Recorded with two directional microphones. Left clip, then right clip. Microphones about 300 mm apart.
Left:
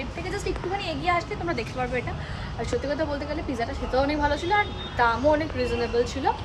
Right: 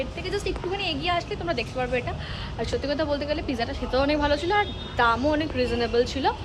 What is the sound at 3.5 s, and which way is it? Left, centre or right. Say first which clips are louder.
A woman's voice: even; centre.